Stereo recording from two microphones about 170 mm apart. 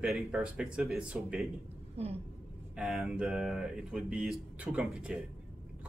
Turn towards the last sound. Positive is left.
turn(degrees=-5)  # may be behind; listen again after turning